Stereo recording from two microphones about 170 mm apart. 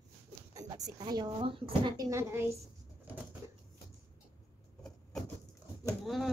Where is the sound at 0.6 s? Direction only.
20° right (ahead or behind).